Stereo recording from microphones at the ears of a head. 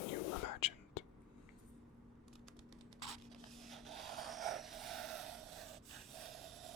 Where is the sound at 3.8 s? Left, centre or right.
Right.